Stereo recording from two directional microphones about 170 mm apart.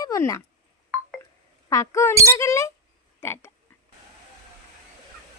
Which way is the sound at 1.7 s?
20° left (ahead or behind).